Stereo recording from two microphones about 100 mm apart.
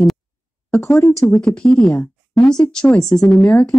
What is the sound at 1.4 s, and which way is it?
Speech, 10° left (ahead or behind).